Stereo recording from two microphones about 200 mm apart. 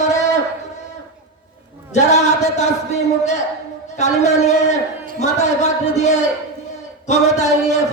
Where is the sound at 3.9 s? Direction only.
35° left (ahead or behind).